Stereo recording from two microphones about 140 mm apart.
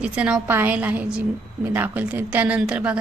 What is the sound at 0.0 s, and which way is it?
A woman's voice, 10° right (ahead or behind).